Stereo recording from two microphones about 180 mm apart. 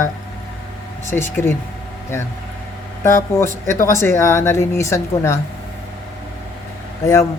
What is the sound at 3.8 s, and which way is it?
Speech, 15° left (ahead or behind).